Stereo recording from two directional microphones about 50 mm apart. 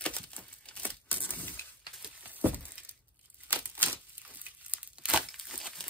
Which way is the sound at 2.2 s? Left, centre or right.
Right.